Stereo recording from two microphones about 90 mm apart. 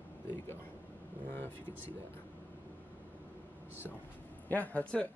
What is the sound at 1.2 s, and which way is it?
Speech, 20° left (ahead or behind).